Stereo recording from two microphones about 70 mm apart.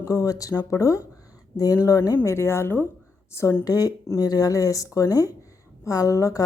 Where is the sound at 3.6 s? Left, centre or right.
Left.